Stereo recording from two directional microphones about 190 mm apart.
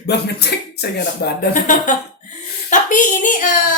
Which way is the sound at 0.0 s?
60° left (ahead or behind).